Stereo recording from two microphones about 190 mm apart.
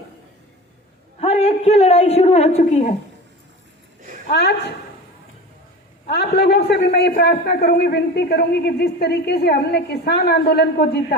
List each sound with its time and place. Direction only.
1.2 s a woman's voice: 35° left (ahead or behind)
4.3 s a man's voice: 60° left (ahead or behind)
6.1 s a man's voice: 60° left (ahead or behind)